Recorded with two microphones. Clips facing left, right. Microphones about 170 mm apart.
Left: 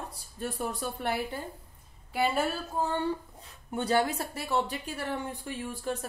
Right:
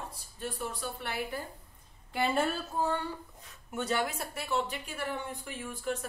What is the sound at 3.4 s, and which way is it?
Speech, 30° left (ahead or behind).